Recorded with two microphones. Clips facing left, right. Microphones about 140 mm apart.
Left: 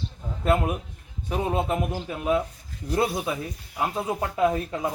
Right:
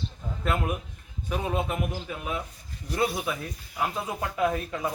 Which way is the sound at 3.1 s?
25° left (ahead or behind).